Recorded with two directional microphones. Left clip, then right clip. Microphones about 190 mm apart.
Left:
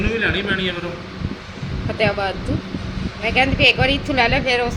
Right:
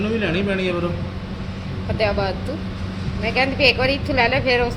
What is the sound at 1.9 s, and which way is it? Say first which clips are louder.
A woman's voice: left 1 dB; 10° left (ahead or behind).